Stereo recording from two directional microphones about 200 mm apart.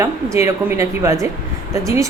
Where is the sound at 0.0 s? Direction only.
15° right (ahead or behind).